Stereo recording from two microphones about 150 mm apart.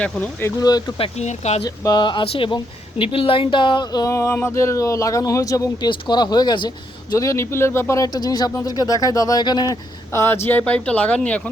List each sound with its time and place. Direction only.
0.6 s speech: 25° left (ahead or behind)
0.9 s speech: 45° left (ahead or behind)
1.6 s speech: 25° left (ahead or behind); by 11.4 s 10° left (ahead or behind)